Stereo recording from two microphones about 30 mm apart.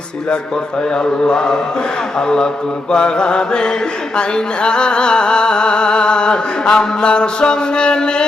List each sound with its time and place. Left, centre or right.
0.9 s mantra: left
4.2 s music: left